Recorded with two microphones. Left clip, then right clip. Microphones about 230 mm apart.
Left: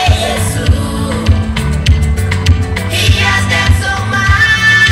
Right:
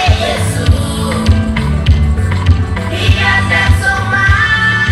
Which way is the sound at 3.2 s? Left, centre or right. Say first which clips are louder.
Right 3 dB; centre.